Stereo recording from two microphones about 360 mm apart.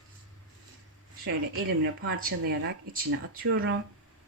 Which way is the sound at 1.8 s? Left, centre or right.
Right.